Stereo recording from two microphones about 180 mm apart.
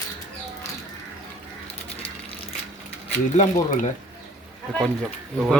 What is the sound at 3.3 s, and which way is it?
Speech, 45° left (ahead or behind).